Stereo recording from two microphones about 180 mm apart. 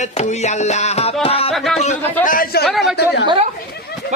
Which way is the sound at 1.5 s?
Centre (ahead or behind).